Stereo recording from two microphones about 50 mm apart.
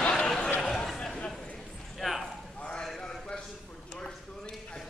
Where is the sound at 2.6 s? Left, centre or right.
Centre.